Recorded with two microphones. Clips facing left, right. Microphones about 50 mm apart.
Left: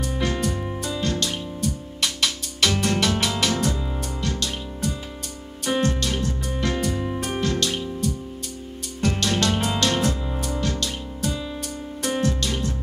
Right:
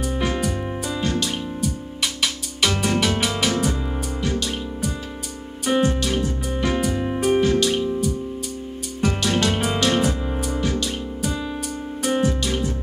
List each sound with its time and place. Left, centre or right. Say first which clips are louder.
0.0 s music: right 2 dB; centre